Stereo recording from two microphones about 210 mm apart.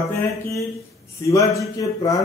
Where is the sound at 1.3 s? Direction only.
15° left (ahead or behind).